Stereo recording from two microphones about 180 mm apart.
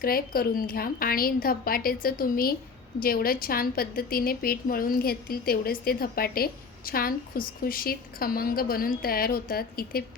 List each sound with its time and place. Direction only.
0.0 s a woman's voice: 55° left (ahead or behind)